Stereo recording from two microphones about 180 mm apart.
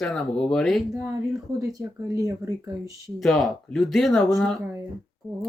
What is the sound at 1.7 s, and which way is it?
Speech, 15° right (ahead or behind).